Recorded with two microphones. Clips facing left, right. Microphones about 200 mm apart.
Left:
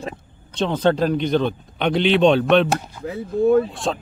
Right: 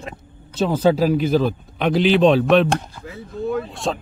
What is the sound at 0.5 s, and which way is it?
Speech, 5° right (ahead or behind).